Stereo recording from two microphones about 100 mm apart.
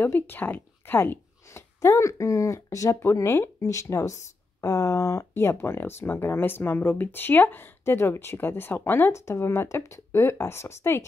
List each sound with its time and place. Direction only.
0.0 s speech: 20° left (ahead or behind)